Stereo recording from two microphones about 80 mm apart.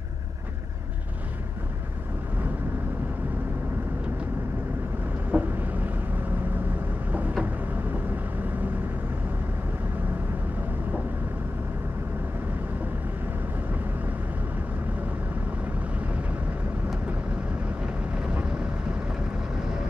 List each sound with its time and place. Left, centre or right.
5.3 s vehicle: right
7.1 s vehicle: centre
18.2 s vehicle: centre